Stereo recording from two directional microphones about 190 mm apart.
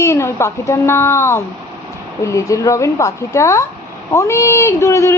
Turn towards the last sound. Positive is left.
turn(degrees=15)  # may be behind; listen again after turning